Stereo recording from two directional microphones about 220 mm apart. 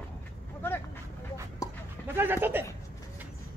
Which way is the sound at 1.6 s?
15° left (ahead or behind).